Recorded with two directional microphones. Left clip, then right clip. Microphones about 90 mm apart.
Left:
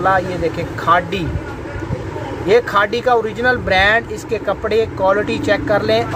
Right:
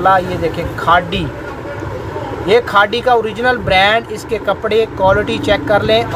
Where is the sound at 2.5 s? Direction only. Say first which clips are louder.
Right 2 dB; 5° right (ahead or behind).